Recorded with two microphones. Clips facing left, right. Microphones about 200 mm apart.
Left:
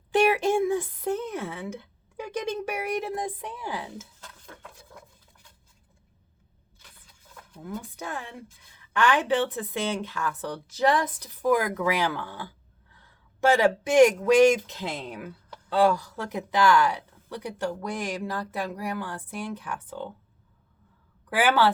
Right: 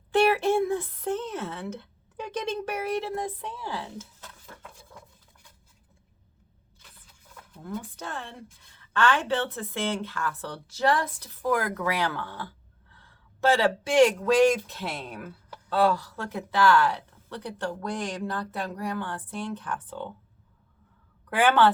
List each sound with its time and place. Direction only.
0.1 s a sound: 15° left (ahead or behind)
7.5 s speech: 10° left (ahead or behind)
13.6 s speech: 15° left (ahead or behind)
21.2 s speech: 5° left (ahead or behind)